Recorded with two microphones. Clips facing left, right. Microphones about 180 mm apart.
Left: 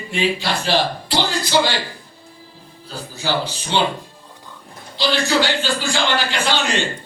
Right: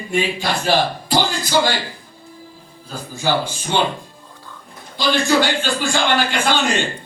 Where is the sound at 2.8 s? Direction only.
50° right (ahead or behind).